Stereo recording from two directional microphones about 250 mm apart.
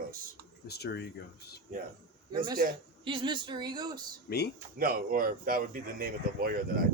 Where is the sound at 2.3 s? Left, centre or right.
Centre.